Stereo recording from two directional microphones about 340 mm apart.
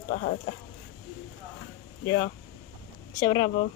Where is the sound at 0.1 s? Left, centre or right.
Left.